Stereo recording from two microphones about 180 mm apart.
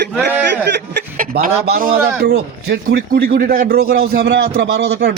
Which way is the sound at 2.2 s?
65° right (ahead or behind).